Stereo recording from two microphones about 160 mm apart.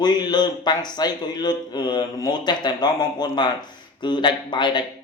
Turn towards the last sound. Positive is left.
turn(degrees=30)  # may be behind; listen again after turning